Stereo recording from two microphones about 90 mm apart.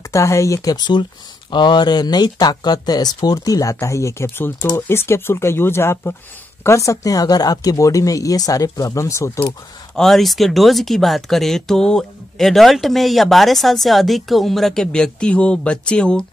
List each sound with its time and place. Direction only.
0.1 s speech: 35° left (ahead or behind)
0.7 s speech: 55° left (ahead or behind); by 9.3 s 35° left (ahead or behind)
9.9 s speech: 5° left (ahead or behind)